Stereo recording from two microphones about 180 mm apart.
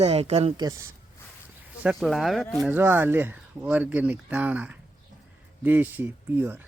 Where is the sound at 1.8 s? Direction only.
Centre (ahead or behind).